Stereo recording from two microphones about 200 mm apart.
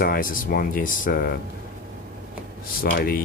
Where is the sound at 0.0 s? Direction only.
45° left (ahead or behind).